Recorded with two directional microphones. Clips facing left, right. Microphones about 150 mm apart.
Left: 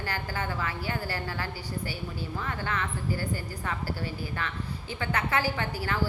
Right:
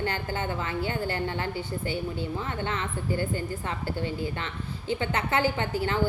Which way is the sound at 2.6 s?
25° right (ahead or behind).